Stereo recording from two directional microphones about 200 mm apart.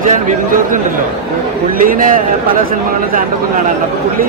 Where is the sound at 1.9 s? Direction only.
45° right (ahead or behind).